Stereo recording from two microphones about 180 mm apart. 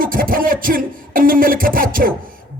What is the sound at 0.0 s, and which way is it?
A man's voice, 50° right (ahead or behind).